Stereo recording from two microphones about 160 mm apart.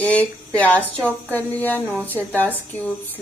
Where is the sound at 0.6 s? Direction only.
10° left (ahead or behind).